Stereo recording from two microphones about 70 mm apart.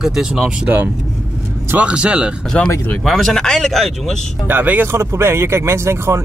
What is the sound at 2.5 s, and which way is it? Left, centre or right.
Speech, centre.